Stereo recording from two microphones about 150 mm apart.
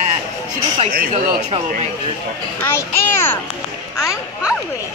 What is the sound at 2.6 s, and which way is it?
Speech, 15° left (ahead or behind).